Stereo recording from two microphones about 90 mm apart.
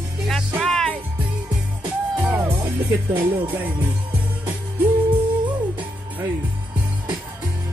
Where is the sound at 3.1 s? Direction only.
65° right (ahead or behind).